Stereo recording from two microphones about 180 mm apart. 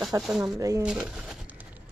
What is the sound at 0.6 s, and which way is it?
Speech, 20° right (ahead or behind).